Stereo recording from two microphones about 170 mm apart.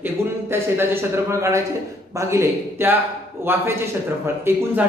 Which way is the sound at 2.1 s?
15° right (ahead or behind).